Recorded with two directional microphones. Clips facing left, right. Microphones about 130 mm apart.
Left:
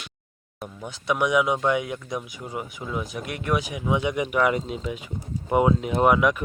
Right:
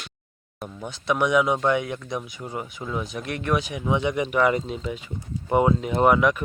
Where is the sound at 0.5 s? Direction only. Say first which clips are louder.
Right 1 dB; centre (ahead or behind).